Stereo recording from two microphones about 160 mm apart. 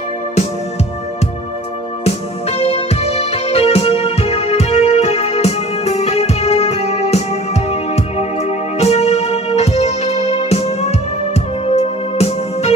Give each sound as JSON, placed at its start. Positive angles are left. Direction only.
{"t": 2.0, "sound": "music", "side_deg": 35}